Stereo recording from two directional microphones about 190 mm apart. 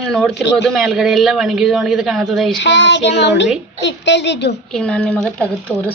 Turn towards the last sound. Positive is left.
turn(degrees=5)  # may be behind; listen again after turning